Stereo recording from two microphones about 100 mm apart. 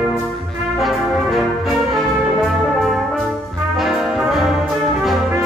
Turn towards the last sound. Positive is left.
turn(degrees=-5)  # may be behind; listen again after turning